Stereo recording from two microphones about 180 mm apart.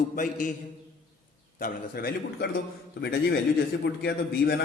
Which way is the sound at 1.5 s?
55° left (ahead or behind).